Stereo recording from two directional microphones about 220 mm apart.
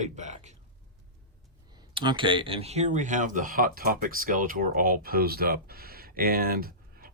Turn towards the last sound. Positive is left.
turn(degrees=-40)  # may be behind; listen again after turning